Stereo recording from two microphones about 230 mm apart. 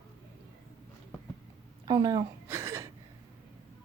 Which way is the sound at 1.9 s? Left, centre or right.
Centre.